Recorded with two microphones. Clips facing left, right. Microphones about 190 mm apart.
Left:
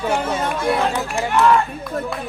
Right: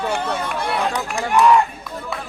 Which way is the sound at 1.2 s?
15° right (ahead or behind).